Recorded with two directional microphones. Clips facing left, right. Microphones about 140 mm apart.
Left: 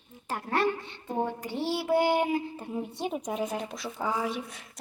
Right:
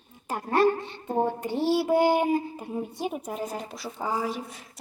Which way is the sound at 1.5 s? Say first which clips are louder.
Right 6 dB; 40° right (ahead or behind).